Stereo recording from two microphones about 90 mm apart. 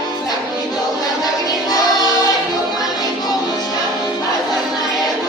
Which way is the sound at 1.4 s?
45° left (ahead or behind).